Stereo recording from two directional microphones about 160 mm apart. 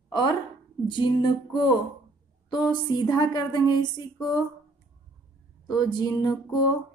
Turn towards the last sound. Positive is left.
turn(degrees=25)  # may be behind; listen again after turning